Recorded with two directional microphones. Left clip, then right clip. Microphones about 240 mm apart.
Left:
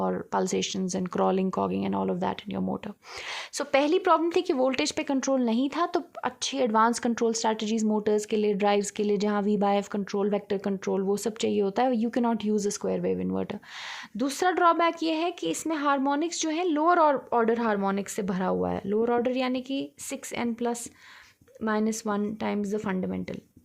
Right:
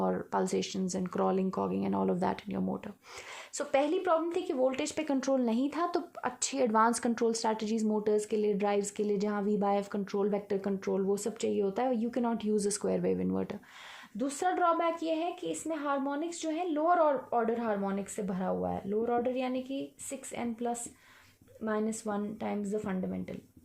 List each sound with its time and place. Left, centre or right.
0.0 s a woman's voice: centre
3.6 s a woman's voice: left
14.2 s a woman's voice: left